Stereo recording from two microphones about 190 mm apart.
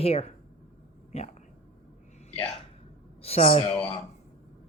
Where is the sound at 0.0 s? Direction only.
30° left (ahead or behind).